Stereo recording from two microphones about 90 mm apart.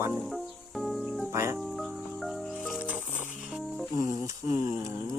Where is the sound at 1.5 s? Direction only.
Centre (ahead or behind).